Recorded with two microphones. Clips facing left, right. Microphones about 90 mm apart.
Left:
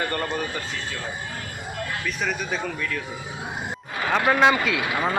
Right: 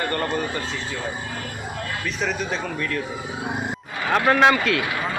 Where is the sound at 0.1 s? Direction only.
5° left (ahead or behind).